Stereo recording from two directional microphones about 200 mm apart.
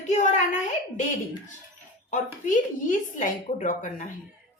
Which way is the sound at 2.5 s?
40° left (ahead or behind).